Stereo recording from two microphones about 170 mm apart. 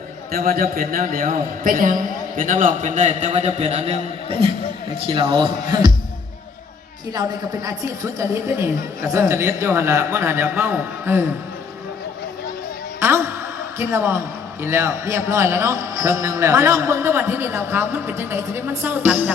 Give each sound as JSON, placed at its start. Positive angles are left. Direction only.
{"t": 0.3, "sound": "a man's voice", "side_deg": -60}
{"t": 7.1, "sound": "a man's voice", "side_deg": -25}
{"t": 13.0, "sound": "a sound", "side_deg": -15}
{"t": 13.7, "sound": "a man's voice", "side_deg": -15}